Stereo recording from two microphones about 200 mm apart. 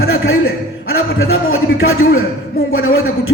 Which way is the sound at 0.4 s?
90° left.